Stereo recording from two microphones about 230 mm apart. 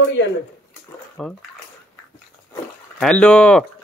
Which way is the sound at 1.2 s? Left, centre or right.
Centre.